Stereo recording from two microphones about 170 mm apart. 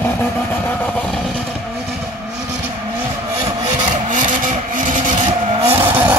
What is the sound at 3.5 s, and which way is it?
Vehicle, 45° right (ahead or behind).